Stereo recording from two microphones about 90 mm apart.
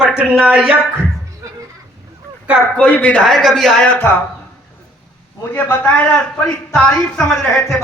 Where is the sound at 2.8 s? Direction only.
15° left (ahead or behind).